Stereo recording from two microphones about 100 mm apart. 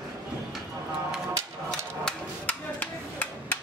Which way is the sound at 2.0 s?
10° left (ahead or behind).